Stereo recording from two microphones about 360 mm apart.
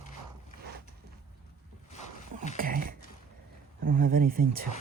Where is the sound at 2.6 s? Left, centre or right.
Right.